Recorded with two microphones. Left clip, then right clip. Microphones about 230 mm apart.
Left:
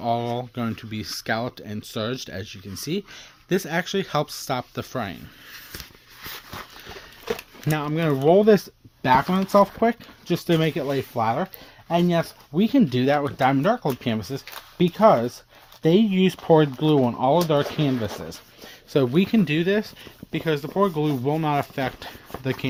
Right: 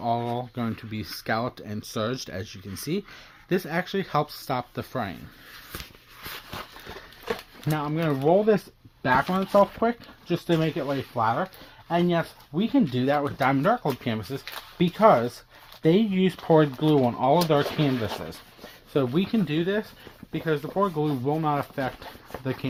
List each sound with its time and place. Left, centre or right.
0.0 s speech: left
6.3 s a sound: centre
7.7 s speech: left
18.6 s speech: left